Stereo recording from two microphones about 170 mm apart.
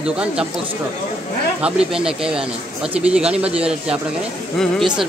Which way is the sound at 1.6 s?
5° right (ahead or behind).